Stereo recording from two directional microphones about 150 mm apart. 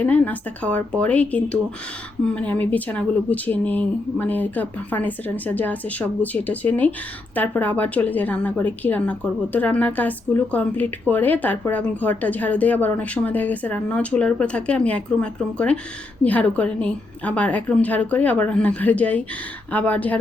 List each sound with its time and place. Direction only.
0.0 s a woman's voice: 10° left (ahead or behind)